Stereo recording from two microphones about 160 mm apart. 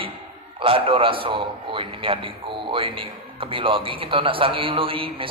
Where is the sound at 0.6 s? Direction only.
35° right (ahead or behind).